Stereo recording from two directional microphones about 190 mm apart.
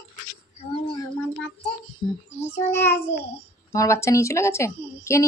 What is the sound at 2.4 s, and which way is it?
A woman's voice, 10° left (ahead or behind).